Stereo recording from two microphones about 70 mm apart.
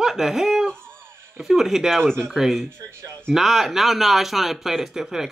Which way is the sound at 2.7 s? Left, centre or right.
Right.